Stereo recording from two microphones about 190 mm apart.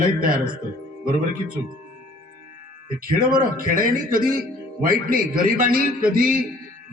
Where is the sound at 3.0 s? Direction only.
50° right (ahead or behind).